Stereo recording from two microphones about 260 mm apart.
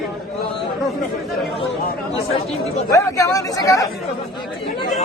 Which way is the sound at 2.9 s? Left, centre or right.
Centre.